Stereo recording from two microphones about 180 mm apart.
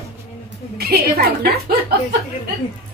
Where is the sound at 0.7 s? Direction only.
60° right (ahead or behind).